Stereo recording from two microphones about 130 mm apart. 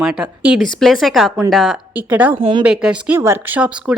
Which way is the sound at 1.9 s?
15° right (ahead or behind).